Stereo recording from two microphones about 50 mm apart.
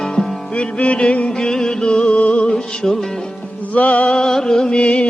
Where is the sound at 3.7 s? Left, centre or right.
Left.